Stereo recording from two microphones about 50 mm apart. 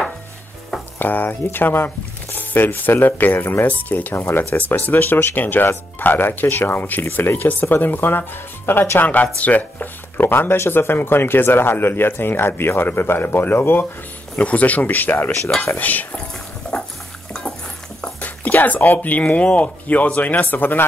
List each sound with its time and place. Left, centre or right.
0.9 s speech: left
4.1 s speech: left
9.0 s speech: left
10.2 s speech: left
14.4 s speech: left
17.3 s stir: centre
18.2 s a sound: left
18.9 s speech: left